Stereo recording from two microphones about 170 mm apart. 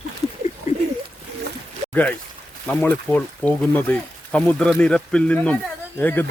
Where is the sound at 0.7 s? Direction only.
40° left (ahead or behind).